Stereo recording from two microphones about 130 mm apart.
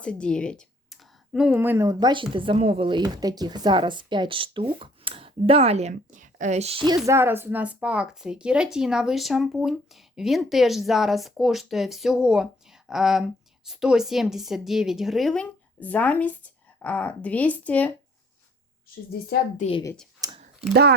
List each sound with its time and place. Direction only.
0.0 s speech: 10° left (ahead or behind); by 1.9 s 15° right (ahead or behind)
1.9 s speech: 35° right (ahead or behind); by 6.8 s 55° right (ahead or behind)
6.8 s speech: 25° right (ahead or behind); by 17.9 s 10° left (ahead or behind)
20.2 s a sound: 30° right (ahead or behind)